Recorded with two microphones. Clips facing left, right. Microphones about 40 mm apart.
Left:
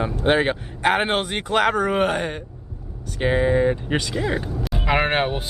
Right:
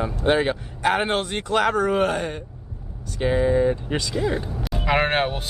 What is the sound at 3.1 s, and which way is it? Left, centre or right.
Speech, left.